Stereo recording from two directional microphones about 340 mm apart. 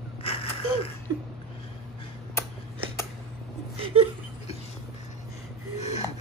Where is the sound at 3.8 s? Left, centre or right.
Centre.